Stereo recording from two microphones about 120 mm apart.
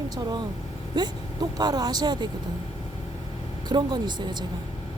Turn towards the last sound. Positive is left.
turn(degrees=-35)  # may be behind; listen again after turning